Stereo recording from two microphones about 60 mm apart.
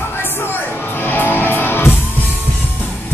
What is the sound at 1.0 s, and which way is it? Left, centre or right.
Music, left.